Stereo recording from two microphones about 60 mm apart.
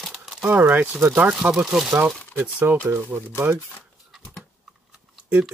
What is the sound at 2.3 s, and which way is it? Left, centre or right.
Speech, right.